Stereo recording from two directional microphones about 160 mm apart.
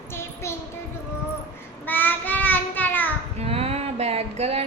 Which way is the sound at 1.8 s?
10° left (ahead or behind).